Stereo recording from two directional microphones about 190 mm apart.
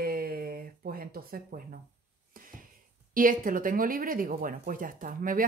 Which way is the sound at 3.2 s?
45° right (ahead or behind).